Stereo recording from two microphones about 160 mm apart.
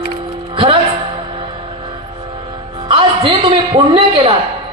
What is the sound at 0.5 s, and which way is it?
Music, 35° right (ahead or behind).